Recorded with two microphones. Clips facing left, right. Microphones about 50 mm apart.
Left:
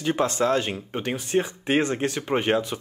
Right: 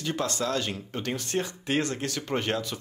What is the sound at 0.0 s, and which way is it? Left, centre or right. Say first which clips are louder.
Speech: left 6 dB; left.